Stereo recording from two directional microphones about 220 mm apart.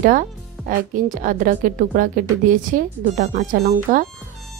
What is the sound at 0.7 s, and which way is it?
A woman's voice, 35° right (ahead or behind).